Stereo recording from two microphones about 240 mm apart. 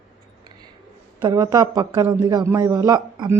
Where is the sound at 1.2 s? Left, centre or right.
Centre.